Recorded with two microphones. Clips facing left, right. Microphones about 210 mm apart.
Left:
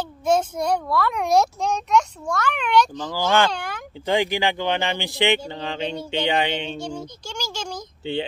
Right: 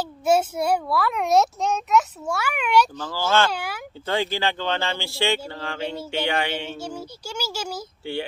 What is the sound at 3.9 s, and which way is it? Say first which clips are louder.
A man's voice: left 4 dB; 15° left (ahead or behind).